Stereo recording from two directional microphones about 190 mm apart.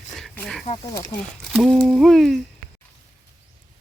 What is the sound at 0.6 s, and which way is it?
Speech, 35° left (ahead or behind).